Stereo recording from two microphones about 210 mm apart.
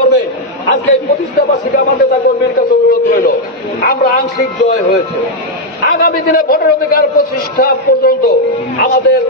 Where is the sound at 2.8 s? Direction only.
45° left (ahead or behind).